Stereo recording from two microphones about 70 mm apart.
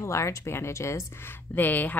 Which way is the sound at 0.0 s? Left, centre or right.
Left.